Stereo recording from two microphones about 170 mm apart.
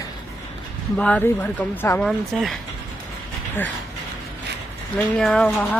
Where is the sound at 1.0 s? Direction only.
10° left (ahead or behind).